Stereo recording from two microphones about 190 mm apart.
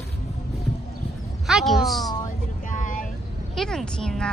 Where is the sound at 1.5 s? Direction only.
Centre (ahead or behind).